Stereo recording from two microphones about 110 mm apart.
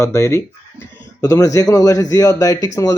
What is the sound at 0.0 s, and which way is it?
Speech, 30° left (ahead or behind).